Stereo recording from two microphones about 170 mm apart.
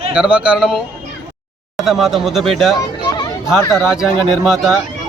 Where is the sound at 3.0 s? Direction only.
25° left (ahead or behind).